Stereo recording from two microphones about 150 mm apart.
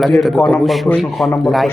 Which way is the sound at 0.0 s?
Centre (ahead or behind).